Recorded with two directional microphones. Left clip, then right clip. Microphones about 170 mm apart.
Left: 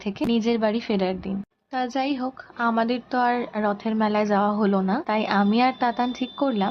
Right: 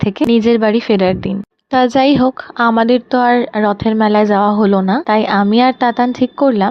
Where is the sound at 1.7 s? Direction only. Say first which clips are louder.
Right 15 dB; 60° right (ahead or behind).